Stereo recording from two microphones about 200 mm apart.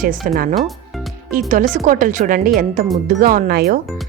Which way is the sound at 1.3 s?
40° right (ahead or behind).